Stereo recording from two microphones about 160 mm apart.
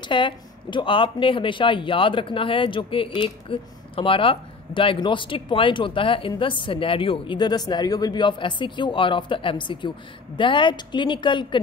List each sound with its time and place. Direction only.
0.1 s speech: 30° left (ahead or behind)